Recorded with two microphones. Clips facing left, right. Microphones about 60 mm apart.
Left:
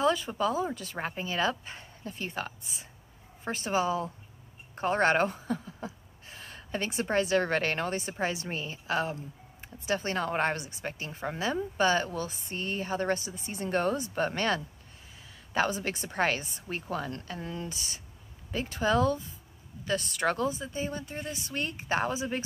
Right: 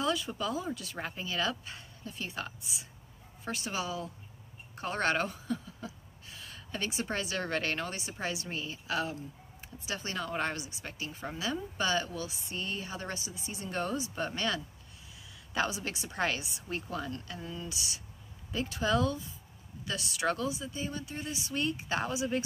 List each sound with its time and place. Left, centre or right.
0.0 s a woman's voice: left
4.7 s a sound: left
7.1 s a woman's voice: left